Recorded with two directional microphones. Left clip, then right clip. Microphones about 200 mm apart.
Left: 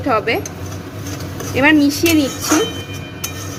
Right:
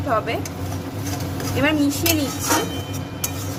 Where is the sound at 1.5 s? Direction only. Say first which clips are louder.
Left 8 dB; 20° left (ahead or behind).